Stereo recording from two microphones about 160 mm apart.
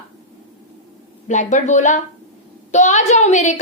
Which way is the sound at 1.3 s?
50° left (ahead or behind).